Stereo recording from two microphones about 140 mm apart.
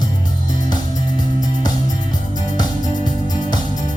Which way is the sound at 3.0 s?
30° left (ahead or behind).